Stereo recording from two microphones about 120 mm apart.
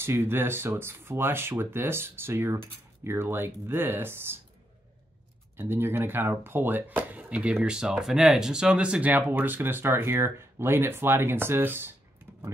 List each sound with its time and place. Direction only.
0.0 s speech: 20° right (ahead or behind)
5.6 s speech: 20° right (ahead or behind)
12.3 s a sound: 15° right (ahead or behind)